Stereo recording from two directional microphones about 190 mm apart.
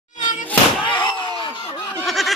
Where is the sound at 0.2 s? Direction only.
40° left (ahead or behind).